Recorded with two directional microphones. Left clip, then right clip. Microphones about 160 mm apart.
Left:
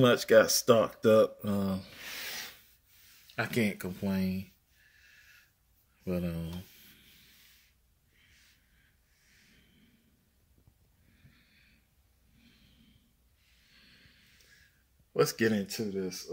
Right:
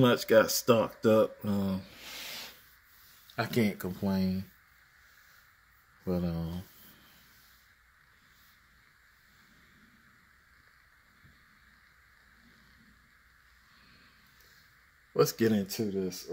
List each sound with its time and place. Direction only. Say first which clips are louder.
0.0 s speech: left 1 dB; centre (ahead or behind)
3.3 s speech: right 1 dB; 5° right (ahead or behind)
6.0 s speech: right 1 dB; 10° right (ahead or behind)
15.1 s speech: right 1 dB; 10° right (ahead or behind)
15.5 s speech: right 2 dB; 25° right (ahead or behind)